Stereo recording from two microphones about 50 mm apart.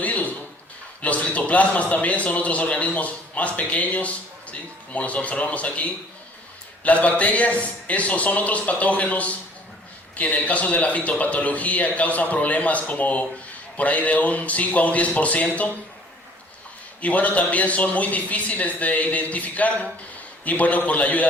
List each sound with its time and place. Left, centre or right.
0.0 s a sound: left
1.0 s a man's voice: left
17.0 s a man's voice: left